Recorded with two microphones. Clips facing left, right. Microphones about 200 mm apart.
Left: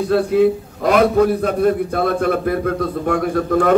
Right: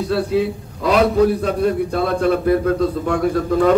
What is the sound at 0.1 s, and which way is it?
A man's voice, 50° left (ahead or behind).